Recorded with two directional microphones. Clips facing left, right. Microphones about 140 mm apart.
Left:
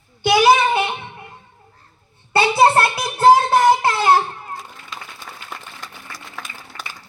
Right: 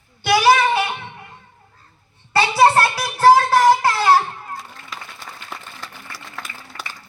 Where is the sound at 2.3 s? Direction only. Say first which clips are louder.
Even; 25° left (ahead or behind).